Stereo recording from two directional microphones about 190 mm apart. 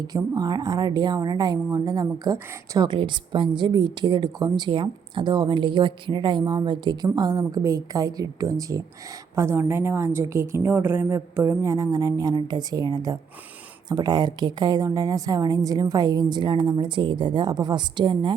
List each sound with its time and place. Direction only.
0.1 s a woman's voice: 20° right (ahead or behind)